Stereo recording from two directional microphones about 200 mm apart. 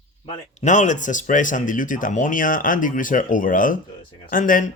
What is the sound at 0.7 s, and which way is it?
Speech, 40° left (ahead or behind).